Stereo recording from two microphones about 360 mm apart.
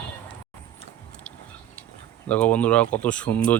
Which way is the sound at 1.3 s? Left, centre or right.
Centre.